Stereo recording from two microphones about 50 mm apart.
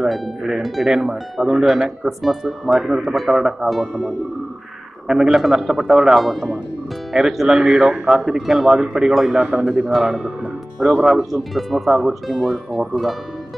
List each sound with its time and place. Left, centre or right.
0.0 s speech: centre
3.8 s speech: centre
5.0 s speech: centre
8.4 s speech: centre